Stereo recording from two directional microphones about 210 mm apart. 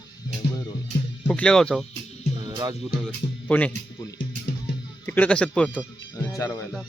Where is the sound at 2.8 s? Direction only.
5° left (ahead or behind).